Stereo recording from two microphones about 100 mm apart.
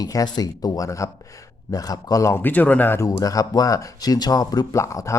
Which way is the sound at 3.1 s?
35° left (ahead or behind).